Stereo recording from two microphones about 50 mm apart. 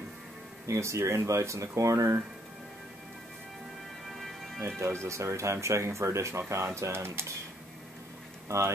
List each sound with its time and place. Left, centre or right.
0.7 s speech: right
4.6 s speech: right
5.0 s speech: right
8.5 s speech: right